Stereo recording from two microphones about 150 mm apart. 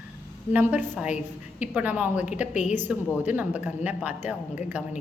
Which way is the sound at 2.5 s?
50° left (ahead or behind).